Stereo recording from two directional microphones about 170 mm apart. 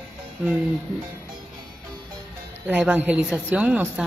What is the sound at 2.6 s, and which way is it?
Speech, 10° right (ahead or behind).